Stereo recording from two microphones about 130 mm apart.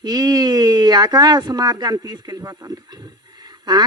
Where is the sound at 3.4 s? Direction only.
30° right (ahead or behind).